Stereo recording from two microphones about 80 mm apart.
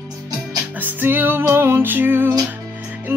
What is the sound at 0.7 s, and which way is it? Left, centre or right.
Music, right.